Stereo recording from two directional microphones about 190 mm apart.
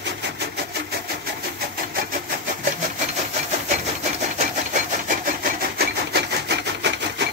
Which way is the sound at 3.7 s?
35° right (ahead or behind).